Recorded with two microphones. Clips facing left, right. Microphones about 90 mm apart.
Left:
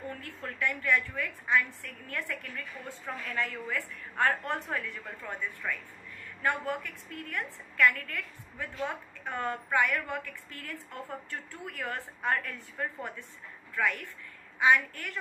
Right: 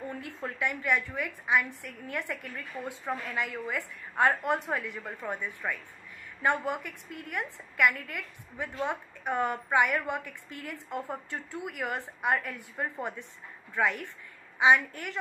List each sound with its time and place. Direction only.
0.2 s a woman's voice: 15° right (ahead or behind)